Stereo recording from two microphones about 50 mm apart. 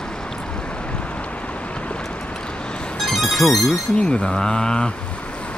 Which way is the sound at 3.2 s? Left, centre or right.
Centre.